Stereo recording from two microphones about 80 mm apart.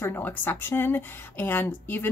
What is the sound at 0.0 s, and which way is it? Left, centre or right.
Speech, left.